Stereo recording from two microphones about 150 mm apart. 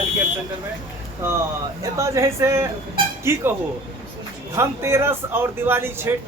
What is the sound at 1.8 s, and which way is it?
Speech, 20° right (ahead or behind).